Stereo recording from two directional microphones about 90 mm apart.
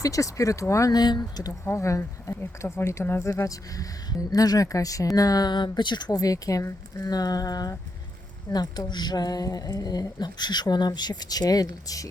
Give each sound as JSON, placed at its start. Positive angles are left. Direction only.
{"t": 0.0, "sound": "speech", "side_deg": 40}
{"t": 1.6, "sound": "speech", "side_deg": 35}